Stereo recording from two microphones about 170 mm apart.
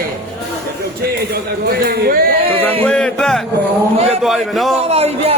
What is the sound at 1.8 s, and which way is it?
Speech, 60° right (ahead or behind).